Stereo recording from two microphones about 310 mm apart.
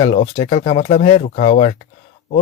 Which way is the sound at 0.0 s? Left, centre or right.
Centre.